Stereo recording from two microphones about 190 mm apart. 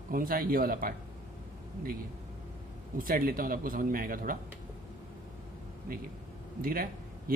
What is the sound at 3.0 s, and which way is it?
Speech, 50° right (ahead or behind).